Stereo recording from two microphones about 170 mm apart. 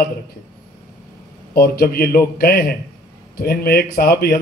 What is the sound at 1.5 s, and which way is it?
A man's voice, 60° left (ahead or behind).